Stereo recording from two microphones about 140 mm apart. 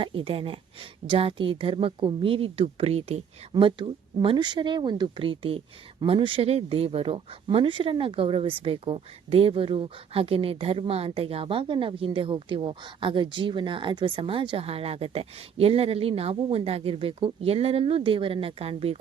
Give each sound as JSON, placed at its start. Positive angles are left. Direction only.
{"t": 0.0, "sound": "speech", "side_deg": -40}
{"t": 3.5, "sound": "speech", "side_deg": -35}